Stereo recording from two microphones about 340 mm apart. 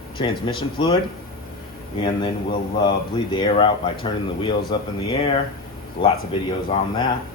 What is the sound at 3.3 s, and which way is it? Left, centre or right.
Speech, centre.